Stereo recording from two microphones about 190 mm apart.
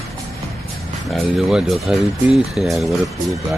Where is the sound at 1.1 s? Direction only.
Centre (ahead or behind).